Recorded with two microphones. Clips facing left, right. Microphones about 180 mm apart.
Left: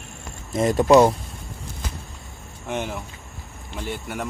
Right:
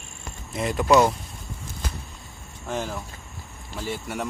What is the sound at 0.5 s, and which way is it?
Speech, 45° left (ahead or behind).